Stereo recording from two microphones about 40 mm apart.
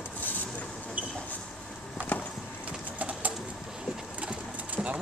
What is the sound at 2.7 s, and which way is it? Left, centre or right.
Bird, right.